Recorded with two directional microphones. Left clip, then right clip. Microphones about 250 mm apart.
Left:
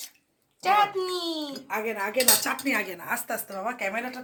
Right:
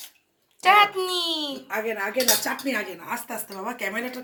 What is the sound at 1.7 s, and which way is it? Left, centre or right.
Speech, centre.